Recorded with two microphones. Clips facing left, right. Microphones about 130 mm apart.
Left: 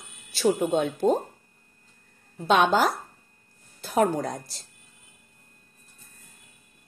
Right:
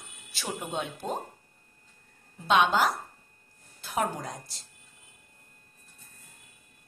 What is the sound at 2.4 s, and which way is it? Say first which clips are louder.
A woman's voice: left 3 dB; 40° left (ahead or behind).